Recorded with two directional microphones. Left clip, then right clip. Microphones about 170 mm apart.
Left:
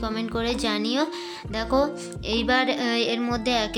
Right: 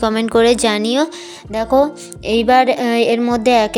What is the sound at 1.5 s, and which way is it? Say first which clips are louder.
Speech: right 9 dB; 30° right (ahead or behind).